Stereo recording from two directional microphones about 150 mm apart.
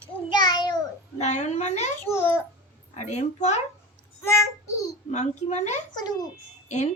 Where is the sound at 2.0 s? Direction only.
15° left (ahead or behind).